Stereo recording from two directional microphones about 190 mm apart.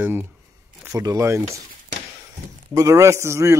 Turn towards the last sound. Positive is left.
turn(degrees=-15)  # may be behind; listen again after turning